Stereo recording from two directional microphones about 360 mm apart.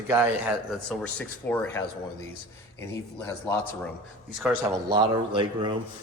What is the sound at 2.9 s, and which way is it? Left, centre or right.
Speech, centre.